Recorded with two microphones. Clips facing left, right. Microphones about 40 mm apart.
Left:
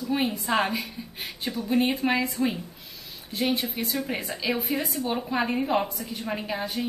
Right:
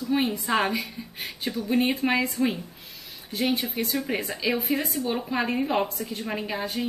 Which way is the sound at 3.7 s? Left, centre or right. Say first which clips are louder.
Right 2 dB; centre.